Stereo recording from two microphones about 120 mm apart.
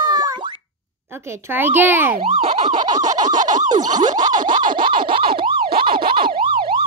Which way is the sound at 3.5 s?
90° right.